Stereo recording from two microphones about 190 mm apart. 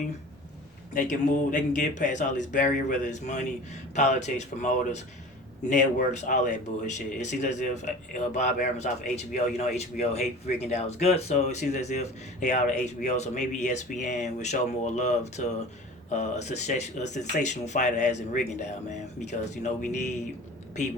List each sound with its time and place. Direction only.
0.9 s speech: 40° left (ahead or behind)